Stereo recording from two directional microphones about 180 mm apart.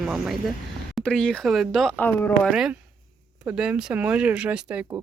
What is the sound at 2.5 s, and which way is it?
Speech, 5° right (ahead or behind).